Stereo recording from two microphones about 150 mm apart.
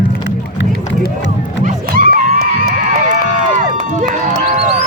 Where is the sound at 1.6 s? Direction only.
70° right (ahead or behind).